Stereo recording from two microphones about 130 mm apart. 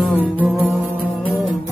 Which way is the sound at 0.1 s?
15° left (ahead or behind).